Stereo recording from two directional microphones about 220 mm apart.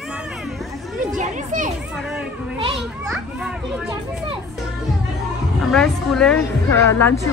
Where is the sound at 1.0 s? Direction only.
35° right (ahead or behind).